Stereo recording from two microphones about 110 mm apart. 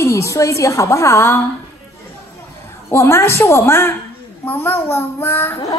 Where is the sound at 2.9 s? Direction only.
25° left (ahead or behind).